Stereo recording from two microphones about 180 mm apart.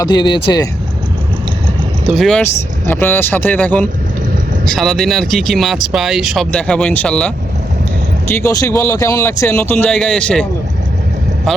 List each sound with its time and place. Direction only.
0.0 s speech: 25° left (ahead or behind)
2.0 s speech: centre (ahead or behind)
2.4 s speech: 10° left (ahead or behind)
8.3 s speech: 15° left (ahead or behind)